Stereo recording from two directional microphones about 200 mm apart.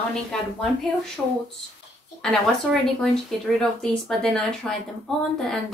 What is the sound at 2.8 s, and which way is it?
Speech, centre (ahead or behind).